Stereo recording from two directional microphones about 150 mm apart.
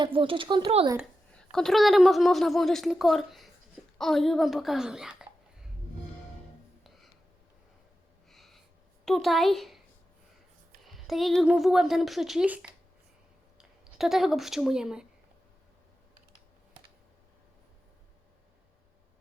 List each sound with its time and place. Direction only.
0.0 s speech: 35° right (ahead or behind)
1.3 s speech: 5° left (ahead or behind)
6.8 s a sound: centre (ahead or behind)
8.3 s snort: centre (ahead or behind)
9.0 s speech: centre (ahead or behind)
10.8 s speech: centre (ahead or behind)